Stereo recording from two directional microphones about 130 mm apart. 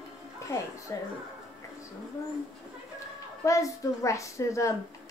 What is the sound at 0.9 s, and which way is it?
Speech, 25° left (ahead or behind).